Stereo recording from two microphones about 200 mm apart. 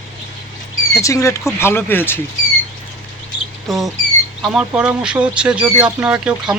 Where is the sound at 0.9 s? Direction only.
15° left (ahead or behind).